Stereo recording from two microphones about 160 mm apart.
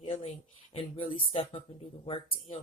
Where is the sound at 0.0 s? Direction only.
35° left (ahead or behind).